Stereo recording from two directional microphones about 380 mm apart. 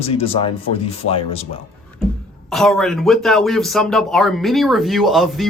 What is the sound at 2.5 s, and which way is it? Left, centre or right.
Speech, centre.